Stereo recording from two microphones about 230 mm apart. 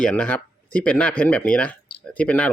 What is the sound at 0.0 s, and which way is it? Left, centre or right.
Speech, centre.